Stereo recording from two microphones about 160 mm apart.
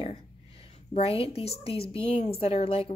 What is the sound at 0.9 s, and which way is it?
Speech, 35° left (ahead or behind).